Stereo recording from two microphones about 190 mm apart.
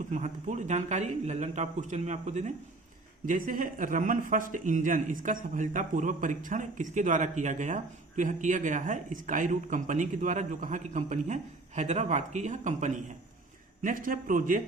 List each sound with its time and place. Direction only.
0.0 s a man's voice: 40° right (ahead or behind)